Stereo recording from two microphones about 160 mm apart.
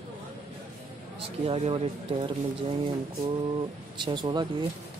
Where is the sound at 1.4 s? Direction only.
35° right (ahead or behind).